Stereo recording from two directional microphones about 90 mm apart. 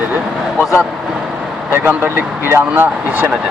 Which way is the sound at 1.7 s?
20° right (ahead or behind).